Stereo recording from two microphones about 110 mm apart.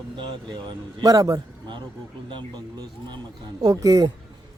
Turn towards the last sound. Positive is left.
turn(degrees=-35)  # may be behind; listen again after turning